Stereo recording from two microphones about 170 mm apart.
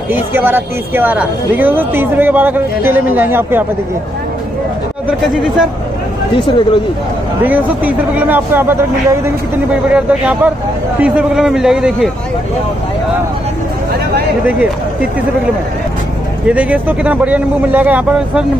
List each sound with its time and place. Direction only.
0.1 s speech: 10° right (ahead or behind)
6.3 s speech: 30° left (ahead or behind)
7.4 s a man's voice: 10° right (ahead or behind)
14.4 s speech: 10° right (ahead or behind)
16.4 s speech: 10° right (ahead or behind)